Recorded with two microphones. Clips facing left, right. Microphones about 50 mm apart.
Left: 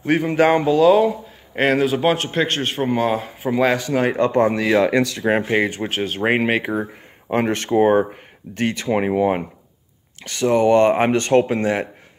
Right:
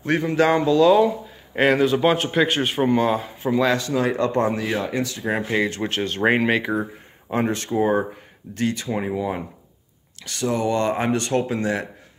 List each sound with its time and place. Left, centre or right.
0.0 s speech: centre
0.3 s speech: left
0.7 s a man's voice: centre
2.9 s speech: centre
3.6 s speech: left
3.9 s speech: left
4.6 s speech: left
5.3 s speech: left
5.8 s speech: centre
7.2 s speech: left
10.2 s speech: left